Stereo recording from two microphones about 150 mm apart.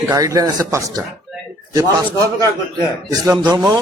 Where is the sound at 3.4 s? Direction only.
25° right (ahead or behind).